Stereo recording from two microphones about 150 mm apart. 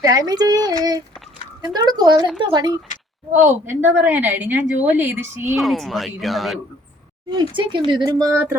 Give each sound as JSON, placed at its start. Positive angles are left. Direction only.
{"t": 0.0, "sound": "a child's voice", "side_deg": -25}
{"t": 3.4, "sound": "a woman's voice", "side_deg": -15}
{"t": 5.5, "sound": "speech", "side_deg": 0}
{"t": 7.3, "sound": "a child's voice", "side_deg": -35}